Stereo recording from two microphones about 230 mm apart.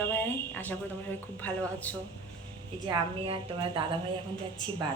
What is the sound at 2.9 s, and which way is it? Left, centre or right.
A woman's voice, right.